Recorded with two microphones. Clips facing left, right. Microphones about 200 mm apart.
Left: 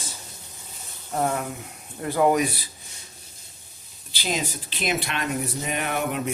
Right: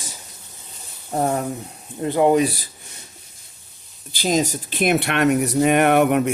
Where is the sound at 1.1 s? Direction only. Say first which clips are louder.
Right 4 dB; 35° right (ahead or behind).